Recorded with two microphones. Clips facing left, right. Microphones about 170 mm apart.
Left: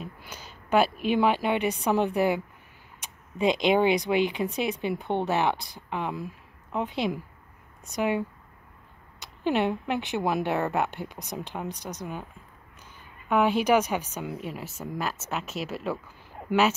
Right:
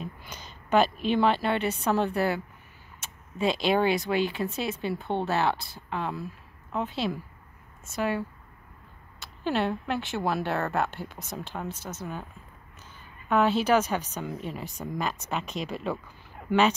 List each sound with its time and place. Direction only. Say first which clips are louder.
0.0 s a woman's voice: right 1 dB; 10° left (ahead or behind)
13.3 s speech: left 1 dB; 15° left (ahead or behind)